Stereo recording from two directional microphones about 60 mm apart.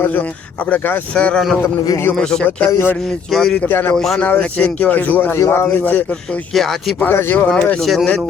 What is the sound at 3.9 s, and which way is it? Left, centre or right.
Speech, centre.